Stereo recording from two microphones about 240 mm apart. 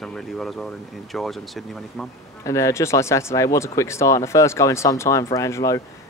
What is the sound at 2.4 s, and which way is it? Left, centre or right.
Speech, centre.